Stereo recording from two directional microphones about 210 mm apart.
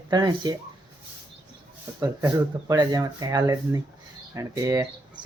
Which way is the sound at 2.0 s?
15° right (ahead or behind).